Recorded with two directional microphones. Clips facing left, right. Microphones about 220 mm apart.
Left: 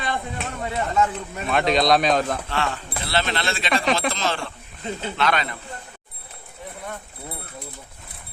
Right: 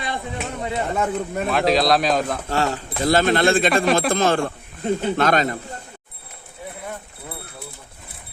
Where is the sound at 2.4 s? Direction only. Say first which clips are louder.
Right 4 dB; 40° right (ahead or behind).